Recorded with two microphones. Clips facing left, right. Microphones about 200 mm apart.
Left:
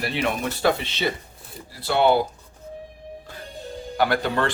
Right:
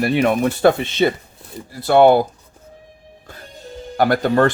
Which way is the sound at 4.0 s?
45° right (ahead or behind).